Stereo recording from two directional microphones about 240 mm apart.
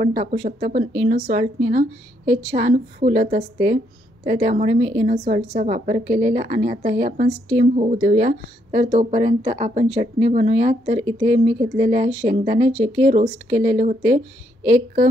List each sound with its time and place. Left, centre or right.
0.0 s speech: right